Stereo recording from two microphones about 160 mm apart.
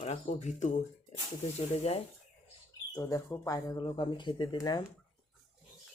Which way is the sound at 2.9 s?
20° left (ahead or behind).